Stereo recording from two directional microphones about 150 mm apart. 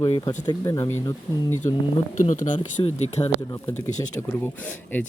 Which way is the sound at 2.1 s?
60° left (ahead or behind).